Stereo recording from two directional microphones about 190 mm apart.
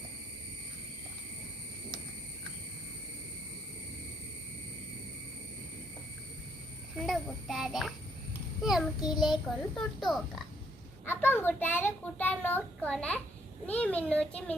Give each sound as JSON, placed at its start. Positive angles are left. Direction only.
{"t": 6.9, "sound": "a child's voice", "side_deg": 0}
{"t": 9.0, "sound": "child singing", "side_deg": 20}
{"t": 9.2, "sound": "a child's voice", "side_deg": 0}
{"t": 11.0, "sound": "a child's voice", "side_deg": 10}